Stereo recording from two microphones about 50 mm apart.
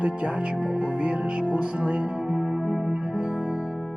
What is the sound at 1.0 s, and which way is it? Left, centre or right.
Music, right.